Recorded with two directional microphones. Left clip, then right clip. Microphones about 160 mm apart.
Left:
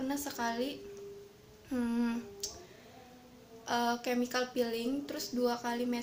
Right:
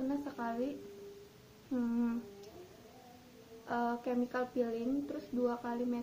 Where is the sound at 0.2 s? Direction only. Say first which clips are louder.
Left 3 dB; 20° left (ahead or behind).